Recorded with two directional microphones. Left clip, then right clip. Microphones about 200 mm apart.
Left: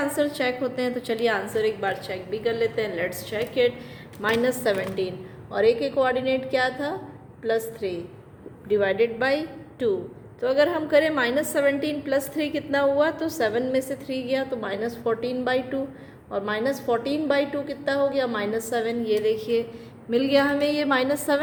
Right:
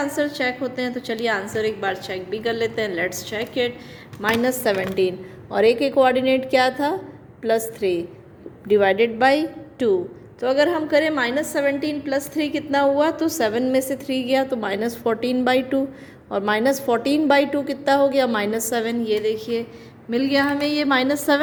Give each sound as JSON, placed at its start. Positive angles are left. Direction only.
{"t": 0.0, "sound": "a woman's voice", "side_deg": -10}
{"t": 19.0, "sound": "a woman's voice", "side_deg": -20}